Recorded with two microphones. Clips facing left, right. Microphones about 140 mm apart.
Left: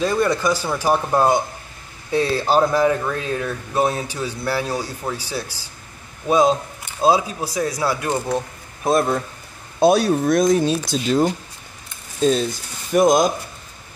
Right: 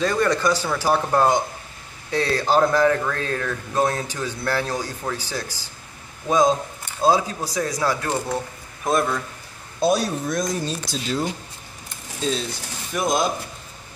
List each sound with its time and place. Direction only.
0.0 s speech: 10° left (ahead or behind)
8.8 s speech: 35° left (ahead or behind)
9.8 s speech: 65° left (ahead or behind); by 13.3 s 45° left (ahead or behind)